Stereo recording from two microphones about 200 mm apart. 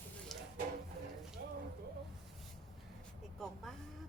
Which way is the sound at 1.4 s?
55° right (ahead or behind).